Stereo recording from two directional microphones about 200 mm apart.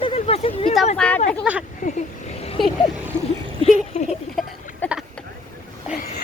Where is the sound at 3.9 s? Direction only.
35° left (ahead or behind).